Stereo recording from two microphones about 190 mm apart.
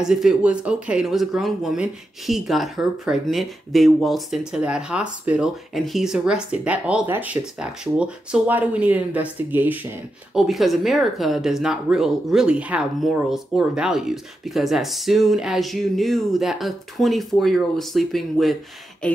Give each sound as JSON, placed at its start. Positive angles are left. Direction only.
{"t": 0.0, "sound": "speech", "side_deg": 0}